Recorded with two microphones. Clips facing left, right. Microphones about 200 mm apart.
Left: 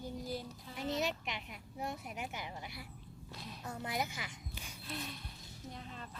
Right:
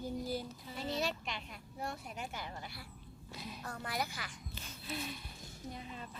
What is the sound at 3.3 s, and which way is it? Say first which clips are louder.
Speech: right 3 dB; centre (ahead or behind).